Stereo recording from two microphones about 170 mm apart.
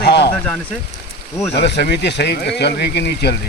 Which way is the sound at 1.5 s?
75° left (ahead or behind).